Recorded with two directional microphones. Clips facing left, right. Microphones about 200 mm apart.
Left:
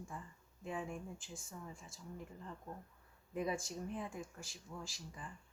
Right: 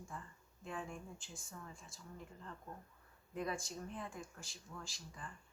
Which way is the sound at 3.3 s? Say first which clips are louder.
Left 3 dB; 10° left (ahead or behind).